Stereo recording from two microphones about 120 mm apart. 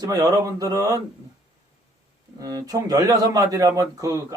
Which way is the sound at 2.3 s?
30° right (ahead or behind).